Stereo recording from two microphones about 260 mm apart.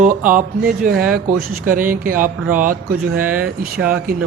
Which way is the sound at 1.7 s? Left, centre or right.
Right.